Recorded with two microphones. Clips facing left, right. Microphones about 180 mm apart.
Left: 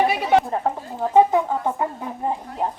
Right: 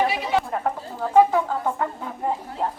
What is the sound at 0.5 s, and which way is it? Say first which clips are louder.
Speech: left 2 dB; 25° left (ahead or behind).